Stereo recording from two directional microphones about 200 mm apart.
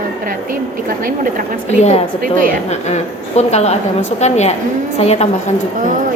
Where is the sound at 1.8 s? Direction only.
30° left (ahead or behind).